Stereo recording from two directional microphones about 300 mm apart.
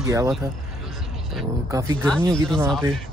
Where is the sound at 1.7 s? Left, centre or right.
Centre.